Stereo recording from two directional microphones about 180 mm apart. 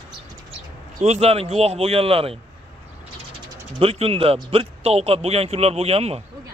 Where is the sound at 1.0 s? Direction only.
35° right (ahead or behind).